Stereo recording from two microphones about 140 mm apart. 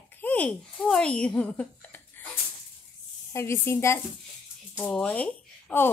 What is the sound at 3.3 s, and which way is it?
Speech, 20° left (ahead or behind).